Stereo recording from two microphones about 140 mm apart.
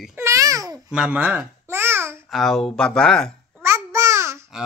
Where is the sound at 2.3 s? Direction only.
Centre (ahead or behind).